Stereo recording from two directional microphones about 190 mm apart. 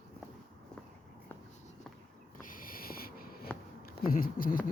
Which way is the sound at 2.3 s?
45° left (ahead or behind).